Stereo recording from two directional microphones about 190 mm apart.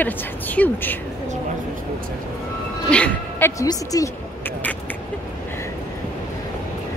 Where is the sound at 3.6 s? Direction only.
20° left (ahead or behind).